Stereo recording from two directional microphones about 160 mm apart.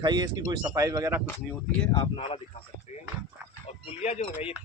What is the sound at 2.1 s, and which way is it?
Speech, 35° left (ahead or behind).